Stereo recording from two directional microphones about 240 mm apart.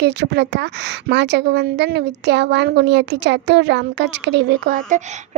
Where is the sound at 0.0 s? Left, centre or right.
Right.